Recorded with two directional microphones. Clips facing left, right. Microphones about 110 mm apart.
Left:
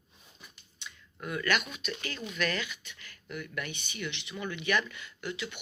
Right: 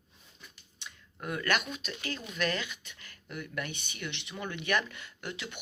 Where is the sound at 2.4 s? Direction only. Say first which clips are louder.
Even; 35° right (ahead or behind).